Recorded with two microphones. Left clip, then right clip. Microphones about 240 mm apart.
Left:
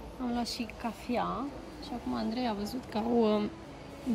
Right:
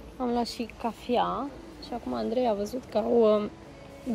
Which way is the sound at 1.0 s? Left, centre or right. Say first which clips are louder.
Right 7 dB; right.